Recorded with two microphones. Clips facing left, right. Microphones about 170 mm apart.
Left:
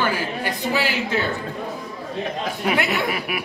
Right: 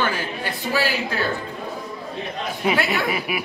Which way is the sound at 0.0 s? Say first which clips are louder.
Left 1 dB; 10° left (ahead or behind).